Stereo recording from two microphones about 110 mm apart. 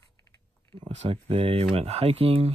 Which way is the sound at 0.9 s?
75° right (ahead or behind).